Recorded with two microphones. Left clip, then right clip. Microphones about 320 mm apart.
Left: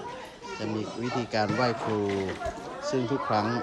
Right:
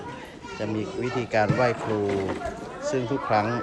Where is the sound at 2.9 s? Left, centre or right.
Centre.